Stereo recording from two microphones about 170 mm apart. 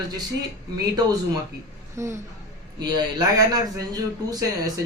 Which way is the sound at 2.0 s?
15° right (ahead or behind).